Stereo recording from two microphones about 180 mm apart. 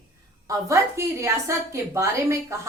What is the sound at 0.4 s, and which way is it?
A woman's voice, 20° right (ahead or behind).